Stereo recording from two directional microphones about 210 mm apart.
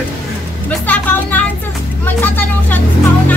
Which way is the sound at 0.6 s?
10° left (ahead or behind).